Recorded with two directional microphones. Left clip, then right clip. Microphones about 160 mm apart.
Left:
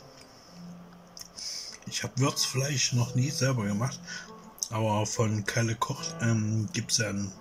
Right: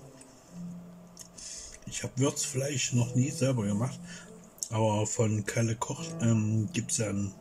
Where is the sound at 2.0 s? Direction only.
35° right (ahead or behind).